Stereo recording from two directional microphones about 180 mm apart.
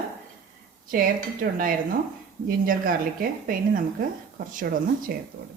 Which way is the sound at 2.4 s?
50° right (ahead or behind).